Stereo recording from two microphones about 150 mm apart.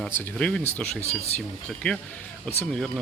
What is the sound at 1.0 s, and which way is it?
Speech, 45° left (ahead or behind).